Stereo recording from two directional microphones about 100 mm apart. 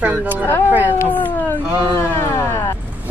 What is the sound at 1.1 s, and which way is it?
Speech, 15° left (ahead or behind).